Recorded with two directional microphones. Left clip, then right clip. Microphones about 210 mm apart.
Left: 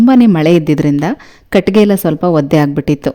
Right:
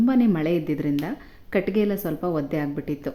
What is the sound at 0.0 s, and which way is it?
Speech, 45° left (ahead or behind).